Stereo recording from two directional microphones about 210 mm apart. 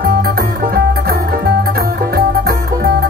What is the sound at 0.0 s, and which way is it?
Music, 45° right (ahead or behind).